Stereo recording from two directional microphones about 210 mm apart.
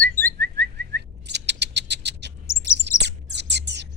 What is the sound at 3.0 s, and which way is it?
Bird, 55° right (ahead or behind).